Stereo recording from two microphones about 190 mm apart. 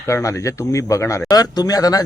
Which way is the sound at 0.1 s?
15° left (ahead or behind).